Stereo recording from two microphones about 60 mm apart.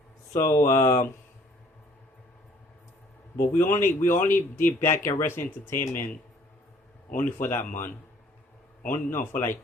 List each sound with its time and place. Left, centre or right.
0.3 s speech: left
3.3 s speech: left
7.3 s speech: left
8.9 s speech: left